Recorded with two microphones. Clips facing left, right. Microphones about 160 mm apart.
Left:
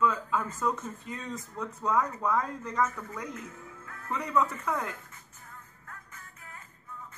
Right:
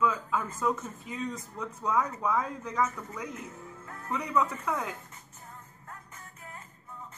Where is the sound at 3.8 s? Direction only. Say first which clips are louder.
Right 2 dB; 25° right (ahead or behind).